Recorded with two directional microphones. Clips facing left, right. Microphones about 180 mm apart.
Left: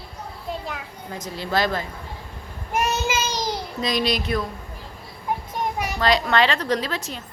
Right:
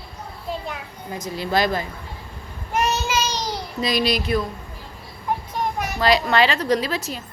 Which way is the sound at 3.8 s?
5° right (ahead or behind).